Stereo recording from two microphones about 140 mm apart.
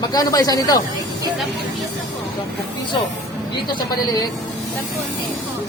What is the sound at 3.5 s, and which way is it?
Speech, 30° left (ahead or behind).